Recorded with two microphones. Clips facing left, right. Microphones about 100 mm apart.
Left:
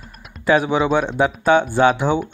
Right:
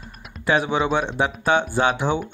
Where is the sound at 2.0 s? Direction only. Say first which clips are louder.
Left 3 dB; 15° left (ahead or behind).